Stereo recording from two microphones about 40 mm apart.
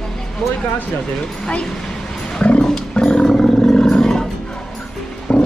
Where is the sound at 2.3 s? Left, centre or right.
Left.